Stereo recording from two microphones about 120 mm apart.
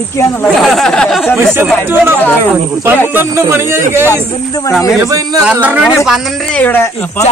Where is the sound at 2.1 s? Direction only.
15° left (ahead or behind).